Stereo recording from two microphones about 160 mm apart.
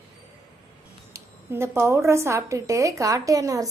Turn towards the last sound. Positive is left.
turn(degrees=-20)  # may be behind; listen again after turning